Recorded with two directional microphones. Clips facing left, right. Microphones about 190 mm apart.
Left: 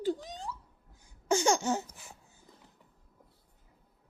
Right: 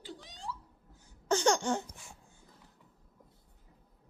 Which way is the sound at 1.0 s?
10° left (ahead or behind).